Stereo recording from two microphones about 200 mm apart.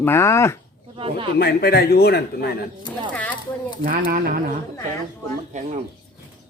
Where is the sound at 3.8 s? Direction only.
45° right (ahead or behind).